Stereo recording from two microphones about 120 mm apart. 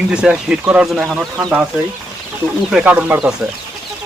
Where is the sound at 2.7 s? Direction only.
10° right (ahead or behind).